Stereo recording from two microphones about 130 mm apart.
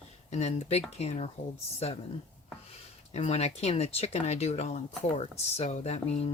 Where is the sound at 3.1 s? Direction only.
55° left (ahead or behind).